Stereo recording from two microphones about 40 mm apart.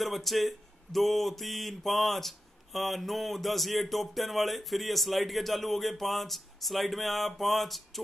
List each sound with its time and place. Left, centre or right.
0.0 s speech: centre